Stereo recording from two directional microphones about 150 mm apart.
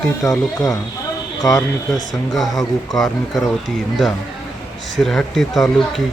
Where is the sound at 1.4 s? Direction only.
20° left (ahead or behind).